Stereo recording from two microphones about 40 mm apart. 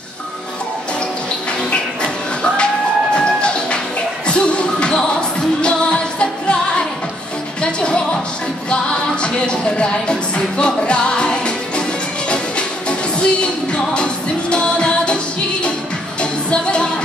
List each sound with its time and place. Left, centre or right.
1.7 s music: left
7.6 s music: left
13.2 s music: left
16.2 s music: left